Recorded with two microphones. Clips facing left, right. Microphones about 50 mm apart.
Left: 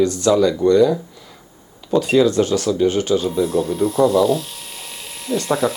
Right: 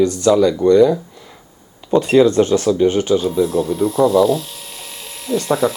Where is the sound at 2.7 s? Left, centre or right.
Centre.